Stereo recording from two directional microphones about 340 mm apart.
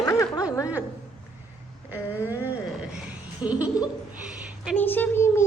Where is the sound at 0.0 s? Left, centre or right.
Centre.